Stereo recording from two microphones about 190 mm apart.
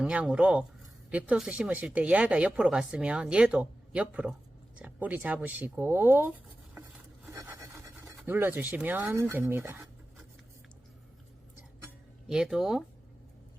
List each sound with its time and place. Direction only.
0.0 s a woman's voice: 5° right (ahead or behind)
8.0 s speech: 10° right (ahead or behind)
12.3 s a woman's voice: 5° right (ahead or behind)